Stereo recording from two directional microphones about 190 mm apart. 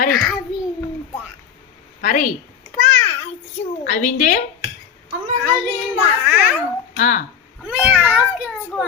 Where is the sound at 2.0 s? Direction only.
40° left (ahead or behind).